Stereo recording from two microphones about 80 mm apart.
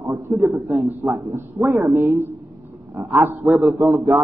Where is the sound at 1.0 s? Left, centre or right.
Right.